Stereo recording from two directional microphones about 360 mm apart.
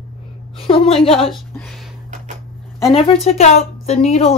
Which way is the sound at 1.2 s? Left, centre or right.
Centre.